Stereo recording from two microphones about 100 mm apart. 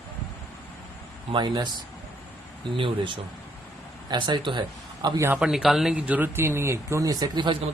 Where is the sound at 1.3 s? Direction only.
50° right (ahead or behind).